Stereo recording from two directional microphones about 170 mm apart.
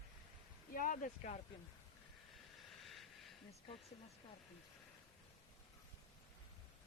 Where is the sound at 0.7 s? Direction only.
50° left (ahead or behind).